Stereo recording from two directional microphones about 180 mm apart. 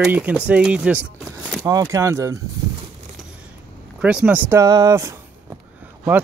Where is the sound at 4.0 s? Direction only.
5° right (ahead or behind).